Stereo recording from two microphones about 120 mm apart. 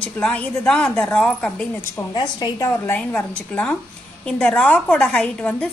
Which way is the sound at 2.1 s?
35° left (ahead or behind).